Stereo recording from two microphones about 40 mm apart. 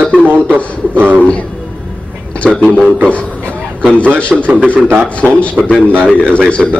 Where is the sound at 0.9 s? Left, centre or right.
Right.